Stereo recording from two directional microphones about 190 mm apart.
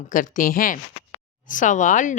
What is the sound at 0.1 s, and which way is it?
Speech, 45° left (ahead or behind).